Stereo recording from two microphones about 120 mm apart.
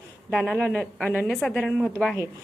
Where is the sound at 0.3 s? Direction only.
5° right (ahead or behind).